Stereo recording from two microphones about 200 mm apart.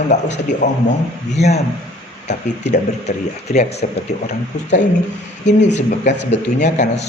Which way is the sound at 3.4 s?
35° left (ahead or behind).